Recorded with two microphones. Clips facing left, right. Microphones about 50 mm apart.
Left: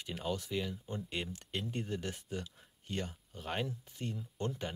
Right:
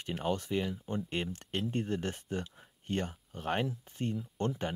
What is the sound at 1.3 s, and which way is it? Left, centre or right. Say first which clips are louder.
Speech: right 4 dB; right.